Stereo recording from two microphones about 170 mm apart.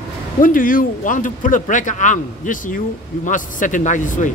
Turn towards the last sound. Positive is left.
turn(degrees=50)  # may be behind; listen again after turning